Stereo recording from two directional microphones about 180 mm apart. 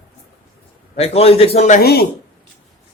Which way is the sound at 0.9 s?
35° left (ahead or behind).